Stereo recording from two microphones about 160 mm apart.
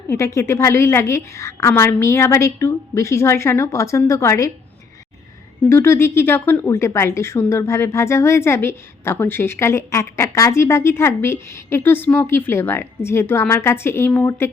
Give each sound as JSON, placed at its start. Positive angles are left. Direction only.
{"t": 0.1, "sound": "a woman's voice", "side_deg": 15}
{"t": 5.6, "sound": "a woman's voice", "side_deg": 15}